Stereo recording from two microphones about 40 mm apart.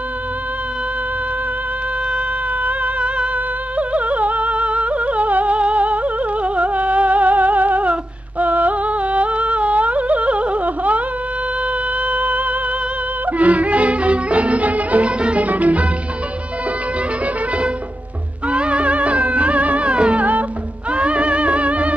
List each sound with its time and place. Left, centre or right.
2.6 s music: right
12.1 s music: right
15.4 s music: right
18.5 s music: right